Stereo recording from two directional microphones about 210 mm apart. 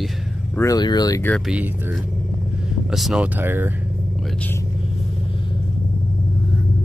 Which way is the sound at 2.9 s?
Centre (ahead or behind).